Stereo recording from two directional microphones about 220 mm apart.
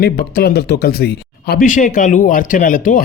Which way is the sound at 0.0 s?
45° left (ahead or behind).